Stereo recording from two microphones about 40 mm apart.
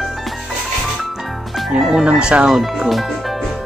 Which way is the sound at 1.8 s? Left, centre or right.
Centre.